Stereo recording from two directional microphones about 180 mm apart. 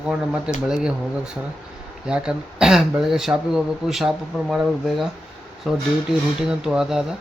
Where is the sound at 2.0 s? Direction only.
5° right (ahead or behind).